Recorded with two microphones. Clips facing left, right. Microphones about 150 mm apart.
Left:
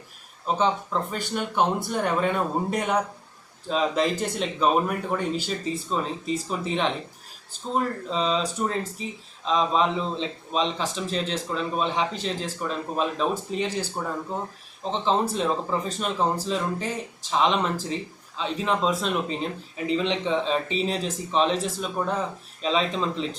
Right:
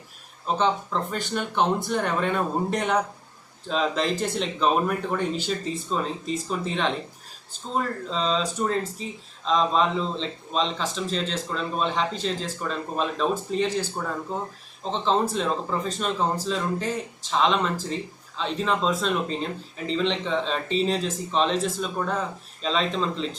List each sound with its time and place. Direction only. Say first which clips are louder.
0.4 s a man's voice: even; 10° left (ahead or behind)